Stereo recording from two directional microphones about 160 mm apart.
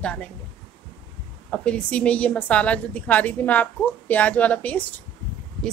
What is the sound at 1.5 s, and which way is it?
A woman's voice, 5° left (ahead or behind).